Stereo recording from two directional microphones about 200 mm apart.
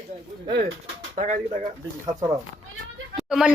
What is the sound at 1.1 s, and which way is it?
Speech, 40° right (ahead or behind).